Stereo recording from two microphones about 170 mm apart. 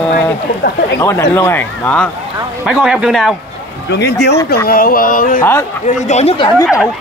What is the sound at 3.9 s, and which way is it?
Speech, 85° left.